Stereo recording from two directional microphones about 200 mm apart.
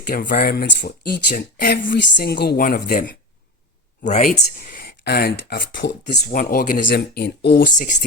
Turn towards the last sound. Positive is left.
turn(degrees=40)  # may be behind; listen again after turning